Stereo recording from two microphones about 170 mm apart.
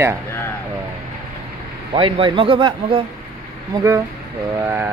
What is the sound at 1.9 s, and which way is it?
A man's voice, 30° right (ahead or behind).